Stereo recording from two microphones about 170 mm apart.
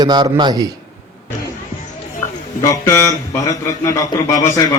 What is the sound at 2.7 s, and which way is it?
Speech, 15° left (ahead or behind).